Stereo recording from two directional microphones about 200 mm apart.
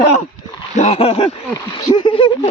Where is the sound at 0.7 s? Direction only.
35° left (ahead or behind).